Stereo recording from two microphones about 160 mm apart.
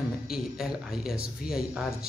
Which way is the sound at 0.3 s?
5° right (ahead or behind).